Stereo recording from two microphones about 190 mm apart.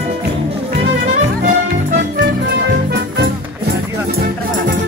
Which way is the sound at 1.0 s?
40° right (ahead or behind).